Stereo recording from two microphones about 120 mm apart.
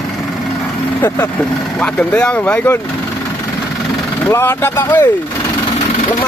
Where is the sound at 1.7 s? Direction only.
10° left (ahead or behind).